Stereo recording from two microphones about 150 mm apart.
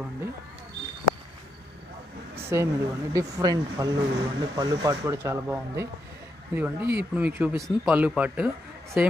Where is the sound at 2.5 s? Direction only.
20° right (ahead or behind).